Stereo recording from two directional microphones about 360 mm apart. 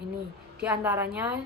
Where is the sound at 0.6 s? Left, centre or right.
Centre.